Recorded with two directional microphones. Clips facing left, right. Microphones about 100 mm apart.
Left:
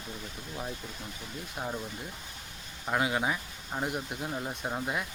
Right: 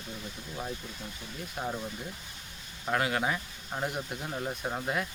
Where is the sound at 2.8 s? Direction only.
10° left (ahead or behind).